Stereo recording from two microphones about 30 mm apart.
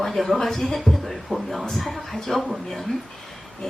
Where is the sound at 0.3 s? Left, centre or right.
Centre.